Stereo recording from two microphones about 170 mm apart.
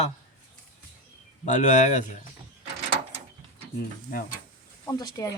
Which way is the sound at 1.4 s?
45° left (ahead or behind).